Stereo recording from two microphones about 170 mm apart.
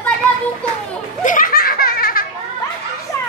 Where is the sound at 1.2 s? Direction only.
55° left (ahead or behind).